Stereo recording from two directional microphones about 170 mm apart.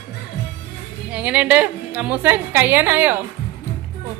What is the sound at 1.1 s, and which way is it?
A woman's voice, 5° right (ahead or behind).